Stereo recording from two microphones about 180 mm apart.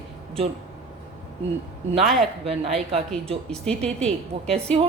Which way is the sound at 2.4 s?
35° right (ahead or behind).